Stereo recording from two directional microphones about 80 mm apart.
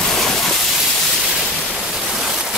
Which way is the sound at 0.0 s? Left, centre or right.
Centre.